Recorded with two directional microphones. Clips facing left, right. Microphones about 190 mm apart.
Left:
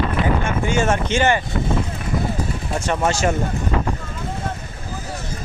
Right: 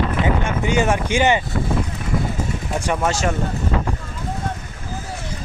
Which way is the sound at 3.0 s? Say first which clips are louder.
Left 3 dB; centre (ahead or behind).